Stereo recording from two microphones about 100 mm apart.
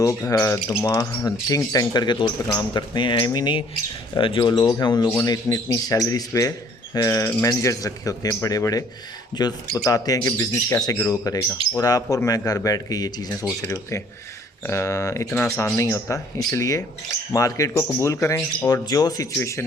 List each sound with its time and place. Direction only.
0.3 s speech: 30° left (ahead or behind)
11.2 s speech: 25° left (ahead or behind)
12.1 s speech: 35° left (ahead or behind)
19.4 s speech: 25° left (ahead or behind)